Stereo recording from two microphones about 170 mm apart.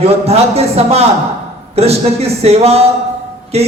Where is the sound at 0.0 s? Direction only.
35° right (ahead or behind).